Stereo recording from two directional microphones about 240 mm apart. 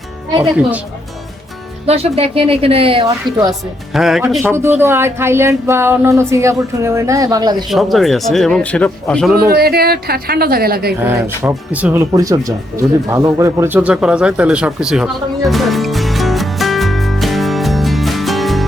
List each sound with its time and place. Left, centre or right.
1.9 s a woman's voice: right
3.9 s speech: centre
7.7 s speech: centre
9.5 s a woman's voice: right
11.0 s speech: centre
13.1 s a sound: centre